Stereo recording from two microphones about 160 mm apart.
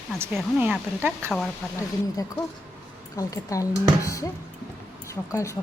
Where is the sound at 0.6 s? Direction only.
10° right (ahead or behind).